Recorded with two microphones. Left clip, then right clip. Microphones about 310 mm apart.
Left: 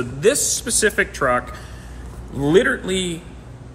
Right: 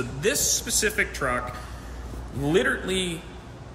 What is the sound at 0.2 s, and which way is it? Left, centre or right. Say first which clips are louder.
Speech: left 7 dB; centre.